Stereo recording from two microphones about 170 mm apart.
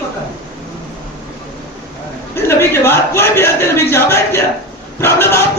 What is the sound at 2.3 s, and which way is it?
A man's voice, 15° left (ahead or behind).